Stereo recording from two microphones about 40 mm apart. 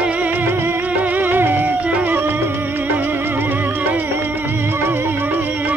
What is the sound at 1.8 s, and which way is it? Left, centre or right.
Music, right.